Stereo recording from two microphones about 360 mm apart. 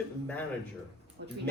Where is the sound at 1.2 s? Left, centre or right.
Right.